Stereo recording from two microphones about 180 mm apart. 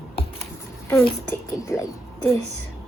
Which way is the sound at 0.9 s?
15° left (ahead or behind).